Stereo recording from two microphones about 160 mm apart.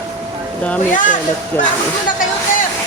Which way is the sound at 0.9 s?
55° left (ahead or behind).